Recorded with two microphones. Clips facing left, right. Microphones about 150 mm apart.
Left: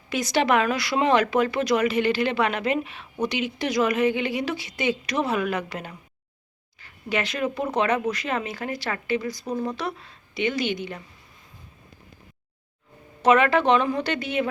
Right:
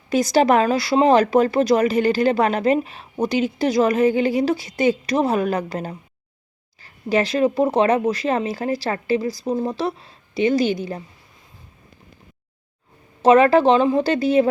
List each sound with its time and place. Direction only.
0.1 s speech: 40° right (ahead or behind)
13.2 s speech: 35° right (ahead or behind)